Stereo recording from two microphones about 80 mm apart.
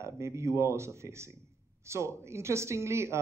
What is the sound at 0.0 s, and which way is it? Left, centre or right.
A man's voice, right.